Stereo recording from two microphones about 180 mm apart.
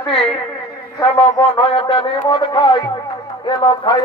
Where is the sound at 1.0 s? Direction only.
30° left (ahead or behind).